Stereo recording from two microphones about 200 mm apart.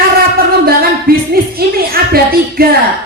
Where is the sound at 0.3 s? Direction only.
50° right (ahead or behind).